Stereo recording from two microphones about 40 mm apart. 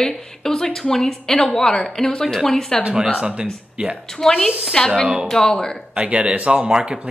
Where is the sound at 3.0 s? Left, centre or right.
Right.